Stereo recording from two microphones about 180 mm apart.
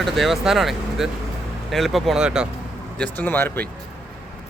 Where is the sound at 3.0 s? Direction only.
10° left (ahead or behind).